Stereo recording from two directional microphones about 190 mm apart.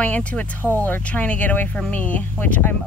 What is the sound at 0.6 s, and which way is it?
Speech, 15° right (ahead or behind).